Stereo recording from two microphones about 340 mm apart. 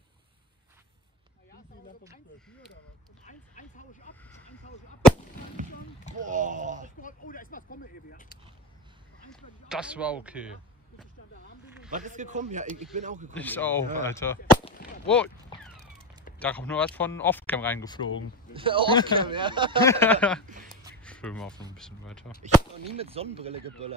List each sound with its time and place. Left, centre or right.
3.3 s speech: left
6.1 s speech: right
7.0 s speech: left
9.3 s speech: centre
11.9 s speech: right
13.3 s speech: centre
18.5 s speech: centre
19.8 s speech: centre
20.4 s speech: right
21.0 s a sound: centre
21.7 s speech: centre
22.4 s speech: centre